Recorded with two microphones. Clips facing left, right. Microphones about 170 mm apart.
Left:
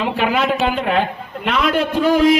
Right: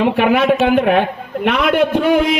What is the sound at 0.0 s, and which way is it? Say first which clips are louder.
A man's voice: right 5 dB; 60° right (ahead or behind).